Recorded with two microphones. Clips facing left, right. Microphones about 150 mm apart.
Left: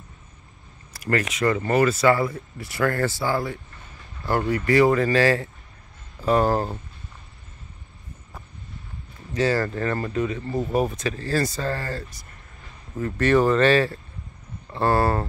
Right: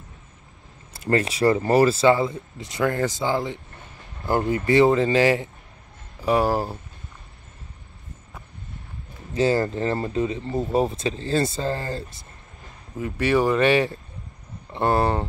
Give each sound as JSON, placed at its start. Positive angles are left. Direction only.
{"t": 0.9, "sound": "speech", "side_deg": -25}
{"t": 9.3, "sound": "speech", "side_deg": -25}
{"t": 13.0, "sound": "speech", "side_deg": -10}